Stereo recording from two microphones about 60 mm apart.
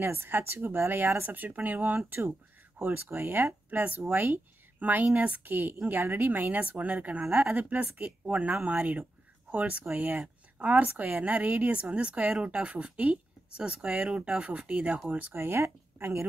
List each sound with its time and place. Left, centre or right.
0.0 s a woman's voice: right
2.0 s a woman's voice: right
15.0 s a woman's voice: right